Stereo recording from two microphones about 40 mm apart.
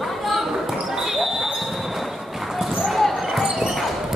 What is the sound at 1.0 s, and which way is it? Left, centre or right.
Basketball bounce, centre.